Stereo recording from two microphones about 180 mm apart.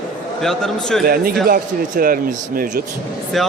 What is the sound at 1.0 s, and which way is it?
Speech, 55° right (ahead or behind).